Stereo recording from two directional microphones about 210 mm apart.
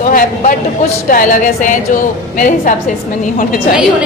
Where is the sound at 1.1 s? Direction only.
40° left (ahead or behind).